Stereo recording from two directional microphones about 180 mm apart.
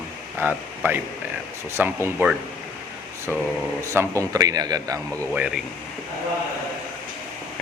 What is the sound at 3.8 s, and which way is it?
A man's voice, 15° right (ahead or behind).